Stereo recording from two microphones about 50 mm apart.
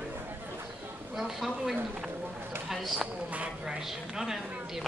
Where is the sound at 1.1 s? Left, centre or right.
Centre.